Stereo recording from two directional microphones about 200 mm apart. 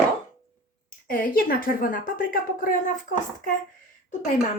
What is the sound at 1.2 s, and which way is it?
Speech, 45° left (ahead or behind).